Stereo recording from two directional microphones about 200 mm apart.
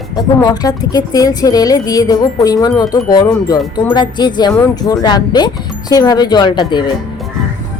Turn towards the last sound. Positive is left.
turn(degrees=20)  # may be behind; listen again after turning